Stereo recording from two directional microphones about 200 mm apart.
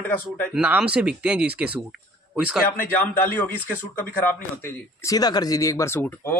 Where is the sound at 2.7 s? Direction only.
10° left (ahead or behind).